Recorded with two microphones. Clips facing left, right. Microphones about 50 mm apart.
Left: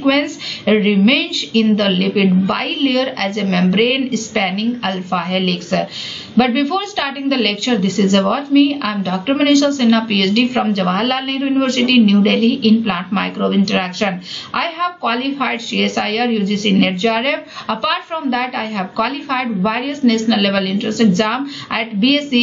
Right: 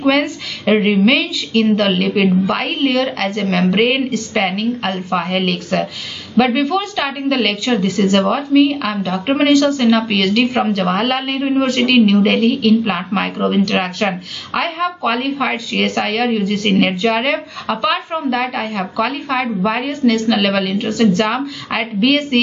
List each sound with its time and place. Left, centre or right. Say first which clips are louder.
0.0 s a woman's voice: even; centre